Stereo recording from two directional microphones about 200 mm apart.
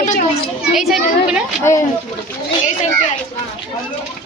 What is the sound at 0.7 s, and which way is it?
Speech, centre (ahead or behind).